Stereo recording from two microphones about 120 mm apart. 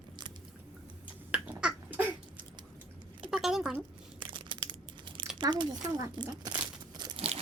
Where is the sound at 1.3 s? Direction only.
10° right (ahead or behind).